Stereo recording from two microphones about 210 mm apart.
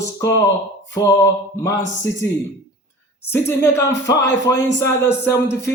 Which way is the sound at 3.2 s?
10° left (ahead or behind).